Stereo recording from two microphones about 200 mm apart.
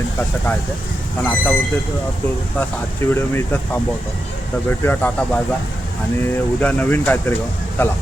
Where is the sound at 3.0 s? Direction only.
10° left (ahead or behind).